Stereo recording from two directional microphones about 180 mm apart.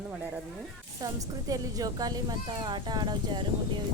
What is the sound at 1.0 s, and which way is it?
A woman's voice, 20° right (ahead or behind).